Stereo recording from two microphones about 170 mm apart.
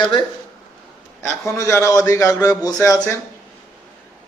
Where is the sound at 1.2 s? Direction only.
15° left (ahead or behind).